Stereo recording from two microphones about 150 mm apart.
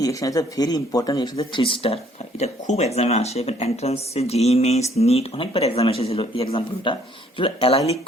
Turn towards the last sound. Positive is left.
turn(degrees=40)  # may be behind; listen again after turning